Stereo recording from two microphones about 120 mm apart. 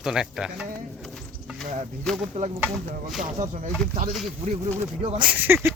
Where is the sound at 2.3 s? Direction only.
65° right (ahead or behind).